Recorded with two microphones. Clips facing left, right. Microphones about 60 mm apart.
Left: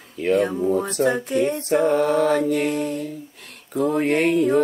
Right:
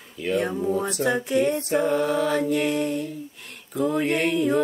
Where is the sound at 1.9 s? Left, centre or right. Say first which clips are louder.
Left 4 dB; left.